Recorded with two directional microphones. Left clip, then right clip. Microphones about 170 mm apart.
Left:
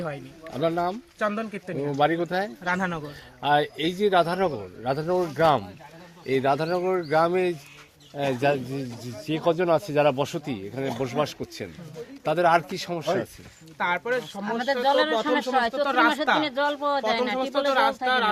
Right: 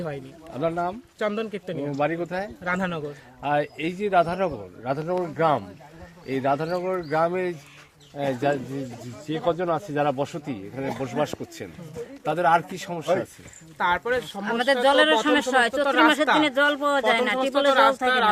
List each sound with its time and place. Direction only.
0.6 s a man's voice: 60° left (ahead or behind)
1.2 s speech: 20° right (ahead or behind)
1.9 s a man's voice: 55° left (ahead or behind)
2.6 s speech: 5° right (ahead or behind)
3.4 s a man's voice: 60° left (ahead or behind)
6.2 s speech: 80° left
13.7 s speech: centre (ahead or behind)
14.4 s a man's voice: 70° right (ahead or behind)
17.3 s speech: centre (ahead or behind)